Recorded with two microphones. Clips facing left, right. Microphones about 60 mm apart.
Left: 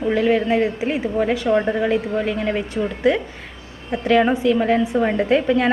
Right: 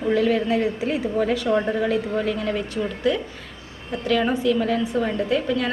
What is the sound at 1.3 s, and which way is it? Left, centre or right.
A woman's voice, centre.